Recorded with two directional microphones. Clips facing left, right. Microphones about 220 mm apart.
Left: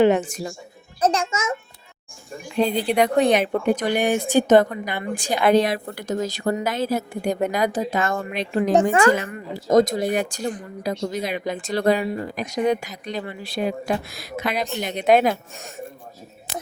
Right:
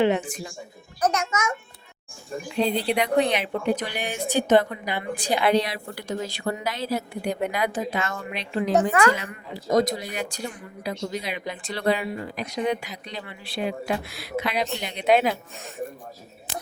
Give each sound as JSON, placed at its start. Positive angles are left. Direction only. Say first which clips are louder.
{"t": 0.0, "sound": "speech", "louder": "left 5 dB", "side_deg": 45}
{"t": 1.0, "sound": "a child's voice", "louder": "left 3 dB", "side_deg": 30}
{"t": 2.6, "sound": "speech", "louder": "left 4 dB", "side_deg": 45}